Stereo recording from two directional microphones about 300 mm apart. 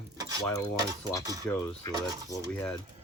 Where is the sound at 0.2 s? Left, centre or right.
Centre.